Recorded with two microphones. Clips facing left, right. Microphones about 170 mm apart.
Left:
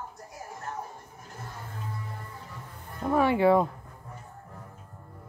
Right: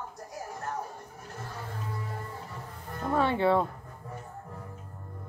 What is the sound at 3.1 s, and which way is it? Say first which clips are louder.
Speech: left 3 dB; 10° left (ahead or behind).